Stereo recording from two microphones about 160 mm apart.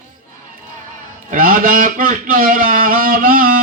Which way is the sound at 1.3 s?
60° right (ahead or behind).